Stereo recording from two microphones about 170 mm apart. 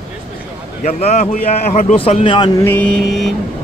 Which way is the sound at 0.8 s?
40° left (ahead or behind).